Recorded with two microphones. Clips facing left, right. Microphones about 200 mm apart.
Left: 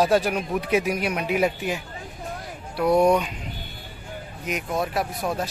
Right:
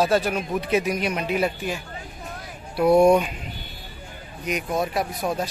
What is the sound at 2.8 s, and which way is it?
Speech, 10° right (ahead or behind).